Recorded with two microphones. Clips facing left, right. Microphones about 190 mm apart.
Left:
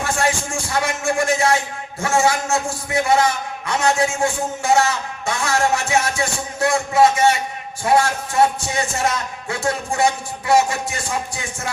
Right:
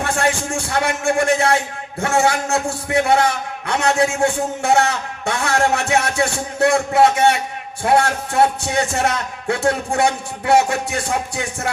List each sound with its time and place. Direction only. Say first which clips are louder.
0.0 s speech: right 1 dB; 60° right (ahead or behind)